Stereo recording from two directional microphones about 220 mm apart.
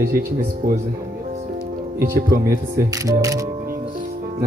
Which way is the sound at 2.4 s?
15° right (ahead or behind).